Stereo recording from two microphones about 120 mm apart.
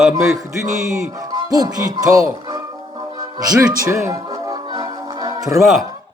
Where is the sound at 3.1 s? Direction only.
30° right (ahead or behind).